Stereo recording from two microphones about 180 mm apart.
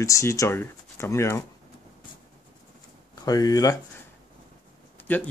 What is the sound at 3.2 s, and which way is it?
Speech, 20° left (ahead or behind).